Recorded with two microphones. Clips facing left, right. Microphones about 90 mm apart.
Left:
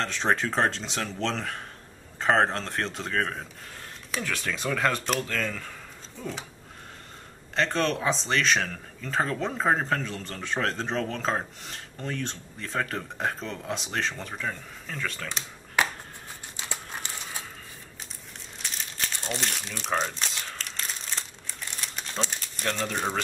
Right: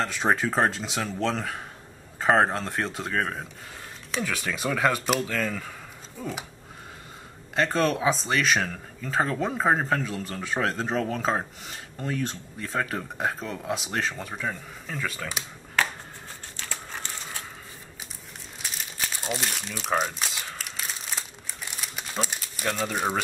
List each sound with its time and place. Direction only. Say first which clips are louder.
0.0 s speech: right 2 dB; 5° right (ahead or behind)
7.5 s speech: right 2 dB; 5° right (ahead or behind)
15.8 s a sound: even; 15° left (ahead or behind)
16.5 s crumpling: even; 15° left (ahead or behind)
18.6 s crumpling: even; 5° right (ahead or behind)